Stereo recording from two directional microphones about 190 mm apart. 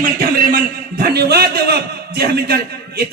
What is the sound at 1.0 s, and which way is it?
A man's voice, 55° right (ahead or behind).